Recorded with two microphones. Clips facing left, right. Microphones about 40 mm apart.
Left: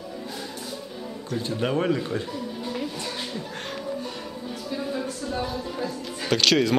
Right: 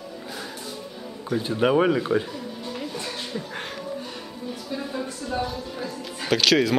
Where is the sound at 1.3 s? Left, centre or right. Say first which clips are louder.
Right 5 dB; centre.